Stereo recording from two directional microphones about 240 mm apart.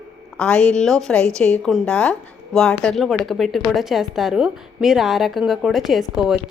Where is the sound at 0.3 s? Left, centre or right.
Centre.